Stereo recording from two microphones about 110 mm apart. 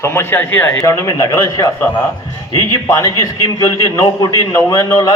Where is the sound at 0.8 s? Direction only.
30° left (ahead or behind).